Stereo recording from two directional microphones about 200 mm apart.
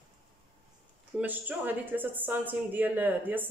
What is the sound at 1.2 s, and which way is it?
Speech, 10° right (ahead or behind).